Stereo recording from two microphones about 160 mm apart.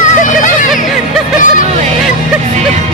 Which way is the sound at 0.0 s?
50° left (ahead or behind).